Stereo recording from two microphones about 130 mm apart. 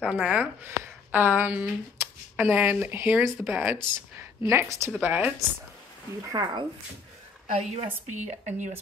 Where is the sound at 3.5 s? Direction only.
15° right (ahead or behind).